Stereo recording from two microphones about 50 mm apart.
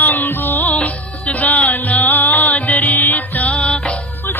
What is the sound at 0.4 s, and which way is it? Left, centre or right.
Music, left.